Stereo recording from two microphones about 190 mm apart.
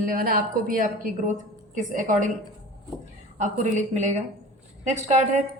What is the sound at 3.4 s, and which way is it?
A woman's voice, 40° right (ahead or behind).